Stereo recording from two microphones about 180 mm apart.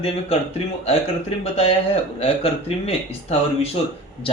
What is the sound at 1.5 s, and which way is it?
A man's voice, 35° left (ahead or behind).